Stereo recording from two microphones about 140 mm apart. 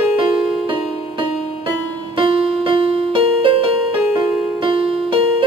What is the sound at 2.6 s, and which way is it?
Music, 40° right (ahead or behind).